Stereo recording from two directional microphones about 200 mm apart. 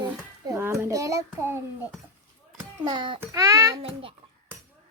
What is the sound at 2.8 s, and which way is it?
A child's voice, 20° right (ahead or behind).